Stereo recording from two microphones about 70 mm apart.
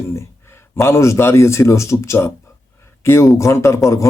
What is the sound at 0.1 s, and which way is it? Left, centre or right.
A man's voice, left.